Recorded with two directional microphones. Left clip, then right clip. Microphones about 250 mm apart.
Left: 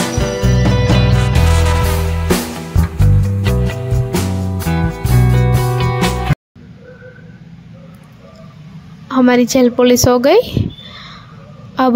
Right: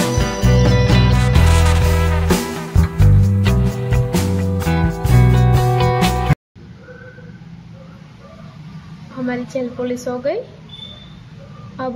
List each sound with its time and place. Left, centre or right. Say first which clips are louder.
0.0 s music: left 2 dB; centre
9.2 s a woman's voice: left 12 dB; left